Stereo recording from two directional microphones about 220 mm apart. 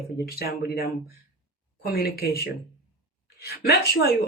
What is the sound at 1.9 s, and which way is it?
Speech, 45° left (ahead or behind).